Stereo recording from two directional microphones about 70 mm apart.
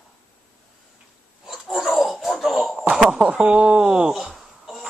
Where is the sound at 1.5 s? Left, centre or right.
Centre.